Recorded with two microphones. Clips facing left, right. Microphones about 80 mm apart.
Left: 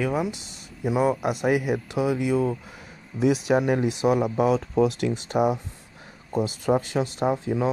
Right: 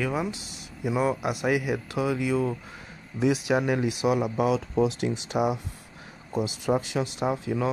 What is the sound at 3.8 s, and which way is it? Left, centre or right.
Speech, left.